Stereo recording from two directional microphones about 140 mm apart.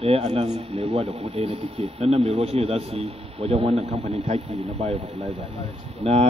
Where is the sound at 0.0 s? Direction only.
40° right (ahead or behind).